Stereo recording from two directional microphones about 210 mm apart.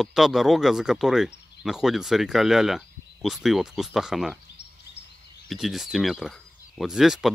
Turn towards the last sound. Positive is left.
turn(degrees=0)  # may be behind; listen again after turning